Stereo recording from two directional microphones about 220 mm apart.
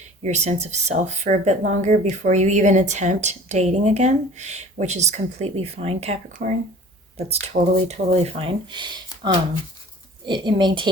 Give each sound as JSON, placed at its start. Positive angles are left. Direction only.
{"t": 0.2, "sound": "speech", "side_deg": -30}